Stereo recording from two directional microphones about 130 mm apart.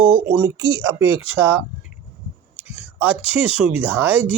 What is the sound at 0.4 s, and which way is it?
Speech, 20° right (ahead or behind).